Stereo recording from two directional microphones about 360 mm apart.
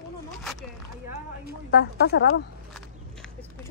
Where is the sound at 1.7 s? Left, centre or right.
Left.